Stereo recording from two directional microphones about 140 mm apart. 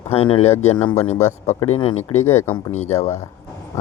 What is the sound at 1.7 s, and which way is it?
Speech, 45° left (ahead or behind).